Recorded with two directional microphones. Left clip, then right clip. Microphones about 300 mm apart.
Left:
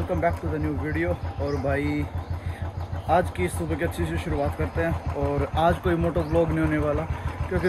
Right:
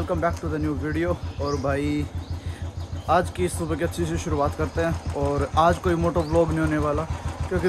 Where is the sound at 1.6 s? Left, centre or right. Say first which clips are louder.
Even; centre.